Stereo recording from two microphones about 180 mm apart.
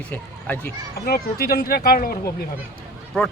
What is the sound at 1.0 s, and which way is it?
Speech, 60° left (ahead or behind).